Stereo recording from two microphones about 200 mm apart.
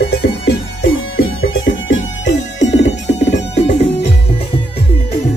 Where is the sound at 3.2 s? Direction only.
30° left (ahead or behind).